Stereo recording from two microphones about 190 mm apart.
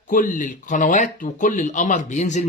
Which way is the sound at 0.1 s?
45° left (ahead or behind).